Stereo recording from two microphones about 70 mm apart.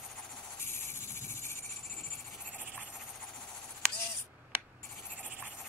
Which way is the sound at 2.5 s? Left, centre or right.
Right.